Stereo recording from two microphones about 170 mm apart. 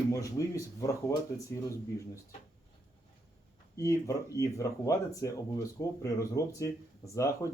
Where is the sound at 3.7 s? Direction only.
20° left (ahead or behind).